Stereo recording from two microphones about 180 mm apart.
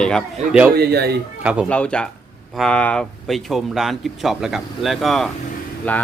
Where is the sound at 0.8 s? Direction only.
65° right (ahead or behind).